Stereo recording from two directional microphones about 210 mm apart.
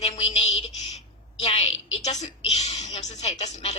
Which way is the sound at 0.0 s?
30° left (ahead or behind).